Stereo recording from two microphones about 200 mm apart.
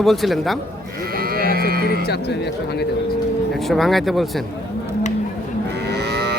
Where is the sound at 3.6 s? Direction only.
Centre (ahead or behind).